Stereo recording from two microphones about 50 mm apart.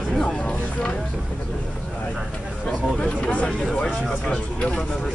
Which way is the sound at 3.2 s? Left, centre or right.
Left.